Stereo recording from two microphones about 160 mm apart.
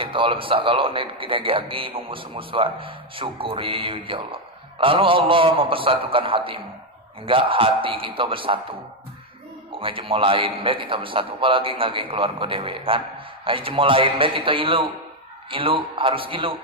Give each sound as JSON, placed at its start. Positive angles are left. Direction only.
{"t": 0.0, "sound": "a man's voice", "side_deg": -35}
{"t": 9.8, "sound": "a man's voice", "side_deg": -35}